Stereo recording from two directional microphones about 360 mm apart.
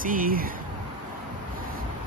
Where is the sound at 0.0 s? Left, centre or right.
Right.